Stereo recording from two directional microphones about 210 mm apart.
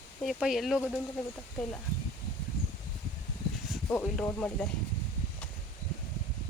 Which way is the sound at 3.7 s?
5° left (ahead or behind).